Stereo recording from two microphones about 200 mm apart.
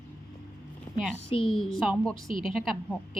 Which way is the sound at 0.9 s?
20° left (ahead or behind).